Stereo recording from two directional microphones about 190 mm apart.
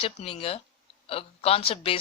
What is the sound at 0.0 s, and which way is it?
A man's voice, 30° left (ahead or behind).